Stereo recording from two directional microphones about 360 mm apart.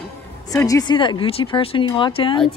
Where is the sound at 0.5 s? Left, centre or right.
Centre.